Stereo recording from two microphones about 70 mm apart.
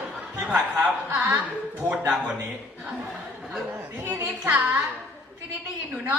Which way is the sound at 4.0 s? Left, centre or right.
Right.